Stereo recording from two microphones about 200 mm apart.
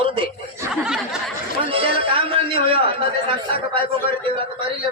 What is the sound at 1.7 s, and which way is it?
Speech, 25° right (ahead or behind).